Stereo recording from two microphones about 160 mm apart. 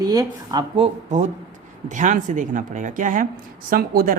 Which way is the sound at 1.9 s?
50° right (ahead or behind).